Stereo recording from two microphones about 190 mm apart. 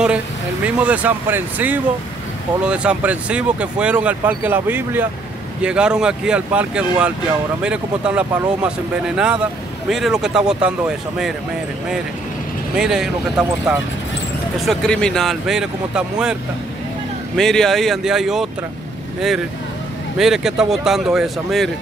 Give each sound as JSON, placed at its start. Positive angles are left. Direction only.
{"t": 0.7, "sound": "speech", "side_deg": -5}
{"t": 12.7, "sound": "speech", "side_deg": -5}
{"t": 17.4, "sound": "speech", "side_deg": 0}
{"t": 20.2, "sound": "speech", "side_deg": 0}